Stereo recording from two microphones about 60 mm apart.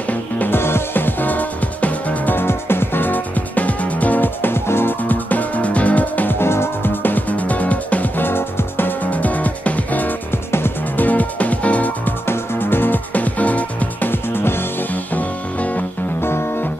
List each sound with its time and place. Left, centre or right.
0.1 s music: left
0.6 s music: left
6.4 s music: left
10.5 s music: left
11.1 s music: left
12.3 s music: left
14.1 s music: left